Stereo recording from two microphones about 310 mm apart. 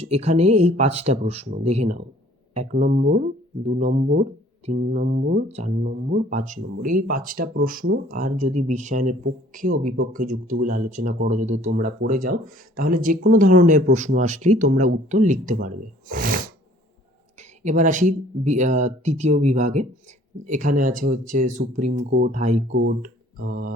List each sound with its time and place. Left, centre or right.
0.0 s speech: centre
17.6 s speech: right
22.7 s speech: right
23.0 s mantra: right